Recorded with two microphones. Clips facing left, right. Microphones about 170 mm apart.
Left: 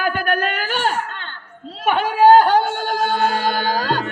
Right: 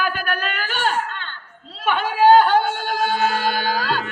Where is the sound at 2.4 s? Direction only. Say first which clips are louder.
Left 1 dB; 40° left (ahead or behind).